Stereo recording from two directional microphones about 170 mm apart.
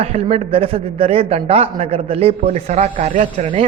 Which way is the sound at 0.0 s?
35° right (ahead or behind).